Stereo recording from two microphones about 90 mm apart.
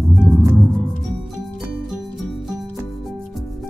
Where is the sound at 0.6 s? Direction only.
5° left (ahead or behind).